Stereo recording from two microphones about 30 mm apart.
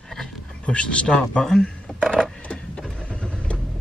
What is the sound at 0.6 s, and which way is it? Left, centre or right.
Speech, left.